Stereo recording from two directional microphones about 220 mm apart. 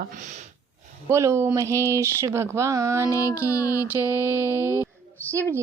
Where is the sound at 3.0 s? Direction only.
15° left (ahead or behind).